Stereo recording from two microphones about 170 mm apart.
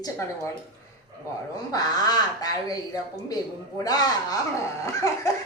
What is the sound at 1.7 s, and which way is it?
Speech, 25° left (ahead or behind).